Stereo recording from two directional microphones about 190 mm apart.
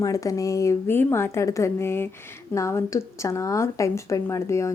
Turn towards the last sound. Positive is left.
turn(degrees=15)  # may be behind; listen again after turning